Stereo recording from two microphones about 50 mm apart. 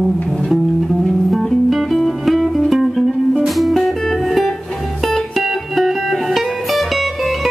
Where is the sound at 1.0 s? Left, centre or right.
Centre.